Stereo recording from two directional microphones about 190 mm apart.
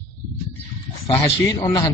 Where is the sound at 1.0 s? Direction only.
25° left (ahead or behind).